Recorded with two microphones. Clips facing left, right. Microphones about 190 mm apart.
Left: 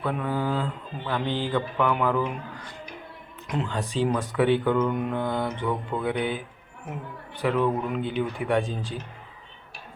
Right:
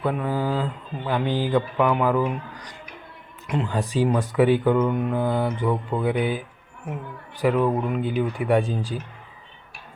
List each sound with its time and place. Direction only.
0.1 s speech: 10° right (ahead or behind)
3.4 s speech: centre (ahead or behind)
4.8 s mantra: centre (ahead or behind)
5.5 s speech: 10° right (ahead or behind)
7.4 s speech: 10° right (ahead or behind)
8.6 s speech: 35° right (ahead or behind)